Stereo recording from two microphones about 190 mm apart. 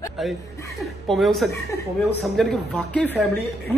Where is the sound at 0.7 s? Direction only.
Centre (ahead or behind).